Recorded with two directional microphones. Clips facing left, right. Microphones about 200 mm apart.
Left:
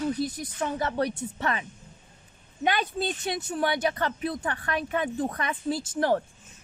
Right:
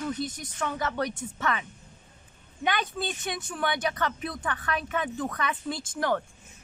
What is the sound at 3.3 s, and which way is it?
Speech, 35° left (ahead or behind).